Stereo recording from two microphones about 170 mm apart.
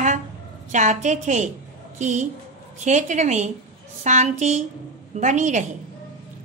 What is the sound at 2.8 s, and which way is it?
A woman's voice, 45° right (ahead or behind).